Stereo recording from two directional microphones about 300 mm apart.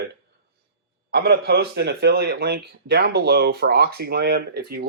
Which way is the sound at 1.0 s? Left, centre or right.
Right.